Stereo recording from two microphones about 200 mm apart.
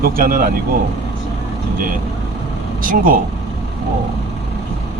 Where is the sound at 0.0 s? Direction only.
45° right (ahead or behind).